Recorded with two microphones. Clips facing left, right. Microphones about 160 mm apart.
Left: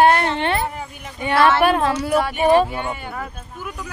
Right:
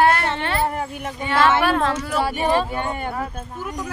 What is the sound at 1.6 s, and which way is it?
A woman's voice, 15° left (ahead or behind).